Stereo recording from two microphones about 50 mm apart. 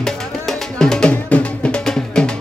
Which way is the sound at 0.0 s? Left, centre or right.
Centre.